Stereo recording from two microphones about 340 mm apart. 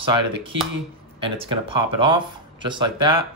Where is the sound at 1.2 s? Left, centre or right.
Centre.